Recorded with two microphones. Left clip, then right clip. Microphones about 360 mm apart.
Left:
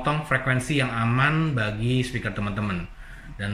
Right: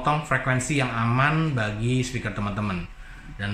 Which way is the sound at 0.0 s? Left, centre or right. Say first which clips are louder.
Right 1 dB; centre.